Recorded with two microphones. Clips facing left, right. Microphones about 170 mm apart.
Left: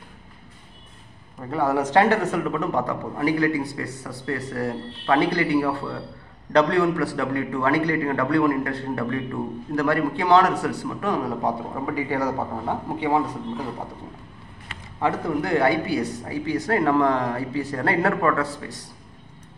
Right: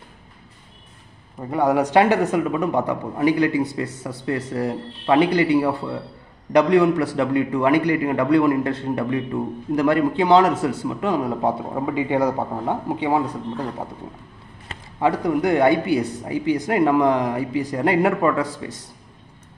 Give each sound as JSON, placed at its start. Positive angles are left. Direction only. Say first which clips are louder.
{"t": 1.5, "sound": "a man's voice", "louder": "right 3 dB", "side_deg": -15}
{"t": 15.0, "sound": "a man's voice", "louder": "right 4 dB", "side_deg": -15}